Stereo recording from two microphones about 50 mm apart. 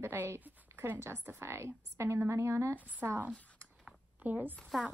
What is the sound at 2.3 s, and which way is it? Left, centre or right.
Speech, right.